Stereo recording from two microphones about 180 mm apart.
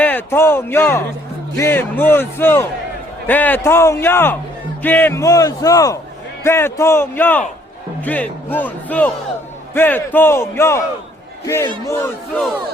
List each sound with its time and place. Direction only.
0.0 s a man's voice: 10° left (ahead or behind)